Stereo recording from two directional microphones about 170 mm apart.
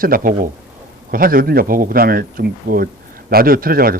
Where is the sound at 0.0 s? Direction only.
55° right (ahead or behind).